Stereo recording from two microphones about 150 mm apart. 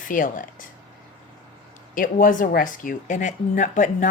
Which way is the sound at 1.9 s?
65° left (ahead or behind).